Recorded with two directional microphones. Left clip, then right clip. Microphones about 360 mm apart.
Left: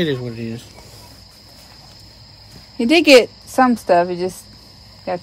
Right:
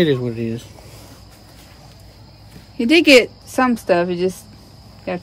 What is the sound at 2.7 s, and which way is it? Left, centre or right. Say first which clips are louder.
Speech: left 1 dB; centre.